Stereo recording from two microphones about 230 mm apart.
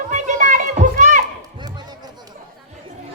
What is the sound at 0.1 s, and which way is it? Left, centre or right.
Children playing, right.